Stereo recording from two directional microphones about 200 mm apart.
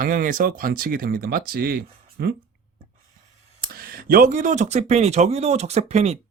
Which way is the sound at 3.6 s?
50° right (ahead or behind).